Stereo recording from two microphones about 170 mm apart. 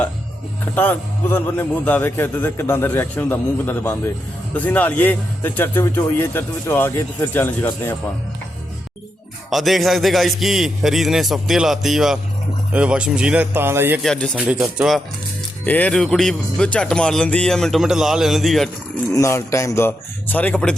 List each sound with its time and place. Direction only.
0.8 s speech: 10° left (ahead or behind)
9.5 s speech: centre (ahead or behind)
14.0 s speech: centre (ahead or behind)
15.6 s speech: 10° left (ahead or behind)
19.1 s speech: 20° left (ahead or behind)